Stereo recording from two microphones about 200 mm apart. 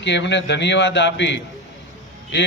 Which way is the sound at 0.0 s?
60° left (ahead or behind).